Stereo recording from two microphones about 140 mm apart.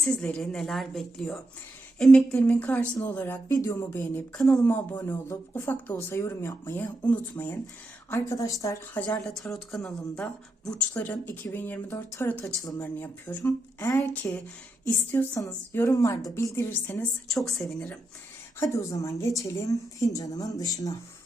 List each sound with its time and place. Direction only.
0.0 s a woman's voice: 5° left (ahead or behind)
9.2 s a woman's voice: 5° left (ahead or behind)
17.3 s a woman's voice: centre (ahead or behind)
18.6 s speech: 25° left (ahead or behind)